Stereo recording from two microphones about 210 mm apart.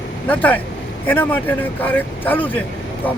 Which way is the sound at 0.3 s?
10° left (ahead or behind).